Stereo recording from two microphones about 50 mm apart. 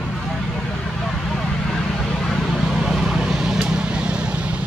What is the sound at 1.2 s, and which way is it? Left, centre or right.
Vehicle, centre.